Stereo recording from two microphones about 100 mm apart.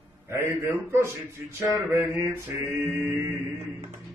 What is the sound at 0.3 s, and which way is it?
Male singing, 30° right (ahead or behind).